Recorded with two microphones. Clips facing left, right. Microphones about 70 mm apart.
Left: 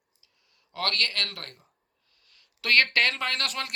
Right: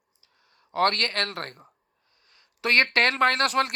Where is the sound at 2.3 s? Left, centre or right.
Right.